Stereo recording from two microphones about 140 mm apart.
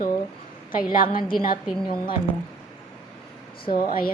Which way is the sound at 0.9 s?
80° left.